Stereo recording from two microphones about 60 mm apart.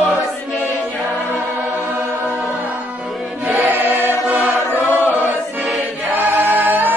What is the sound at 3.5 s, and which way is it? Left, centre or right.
Music, right.